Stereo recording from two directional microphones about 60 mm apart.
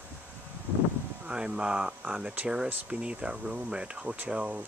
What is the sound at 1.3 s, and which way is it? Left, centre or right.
Speech, centre.